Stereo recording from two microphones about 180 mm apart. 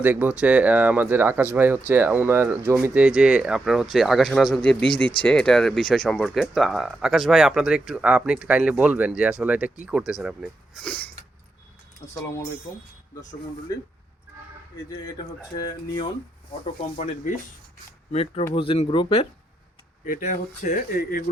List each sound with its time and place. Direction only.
0.0 s speech: 10° right (ahead or behind)
15.5 s speech: 20° left (ahead or behind)
18.1 s speech: 35° left (ahead or behind)
20.1 s speech: 45° left (ahead or behind)